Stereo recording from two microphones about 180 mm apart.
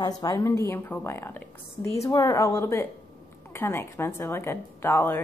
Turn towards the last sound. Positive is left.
turn(degrees=10)  # may be behind; listen again after turning